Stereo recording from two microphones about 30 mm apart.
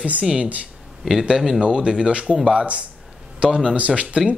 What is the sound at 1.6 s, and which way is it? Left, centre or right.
Speech, right.